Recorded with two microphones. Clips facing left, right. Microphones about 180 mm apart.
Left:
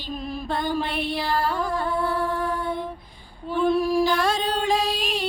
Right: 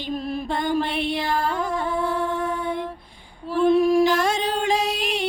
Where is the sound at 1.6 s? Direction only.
20° right (ahead or behind).